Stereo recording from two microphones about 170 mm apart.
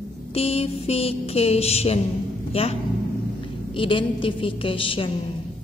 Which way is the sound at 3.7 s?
30° left (ahead or behind).